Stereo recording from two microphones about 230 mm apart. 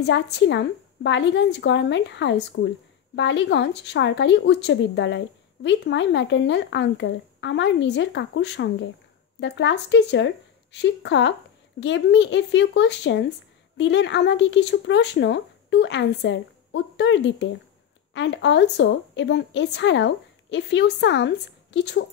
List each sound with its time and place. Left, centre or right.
0.0 s speech: left